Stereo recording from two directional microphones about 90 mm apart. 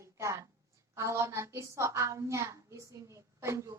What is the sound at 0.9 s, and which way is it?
A woman's voice, 35° right (ahead or behind).